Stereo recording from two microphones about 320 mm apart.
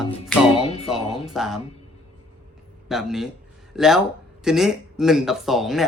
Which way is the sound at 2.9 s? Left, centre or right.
Centre.